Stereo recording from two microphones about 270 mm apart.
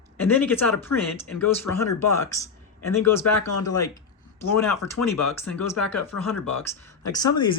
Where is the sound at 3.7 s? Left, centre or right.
Centre.